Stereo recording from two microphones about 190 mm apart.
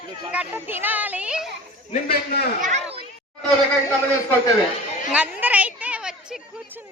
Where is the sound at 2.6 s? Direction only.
35° right (ahead or behind).